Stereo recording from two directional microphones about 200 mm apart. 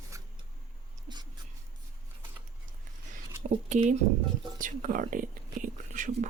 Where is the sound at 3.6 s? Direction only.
35° right (ahead or behind).